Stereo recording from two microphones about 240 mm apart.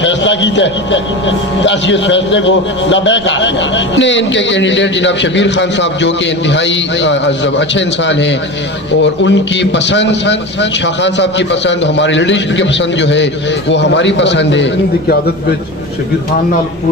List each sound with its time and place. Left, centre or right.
0.0 s a man's voice: left